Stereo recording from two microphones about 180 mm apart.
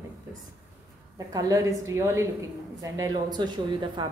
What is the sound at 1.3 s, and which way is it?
A woman's voice, 20° right (ahead or behind).